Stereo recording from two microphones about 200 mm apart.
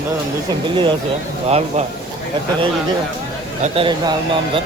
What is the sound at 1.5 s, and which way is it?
Speech, 30° right (ahead or behind).